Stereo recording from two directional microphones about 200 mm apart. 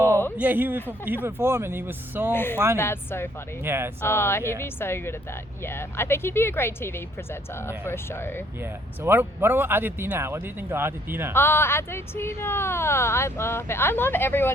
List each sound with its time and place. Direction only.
0.3 s speech: 10° right (ahead or behind)
2.3 s speech: 10° left (ahead or behind)
3.6 s speech: 10° right (ahead or behind)
4.0 s speech: 10° left (ahead or behind)
9.0 s speech: 10° right (ahead or behind)
11.3 s speech: 10° left (ahead or behind)